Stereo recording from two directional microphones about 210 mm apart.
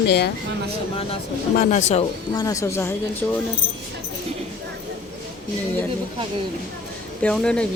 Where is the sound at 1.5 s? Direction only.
35° left (ahead or behind).